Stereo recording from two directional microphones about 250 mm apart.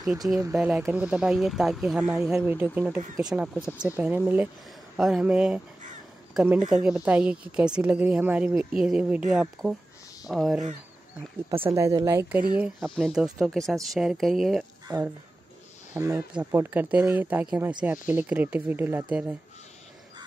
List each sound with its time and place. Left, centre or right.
0.4 s a woman's voice: centre
11.6 s speech: centre
12.5 s a woman's voice: centre
14.9 s speech: centre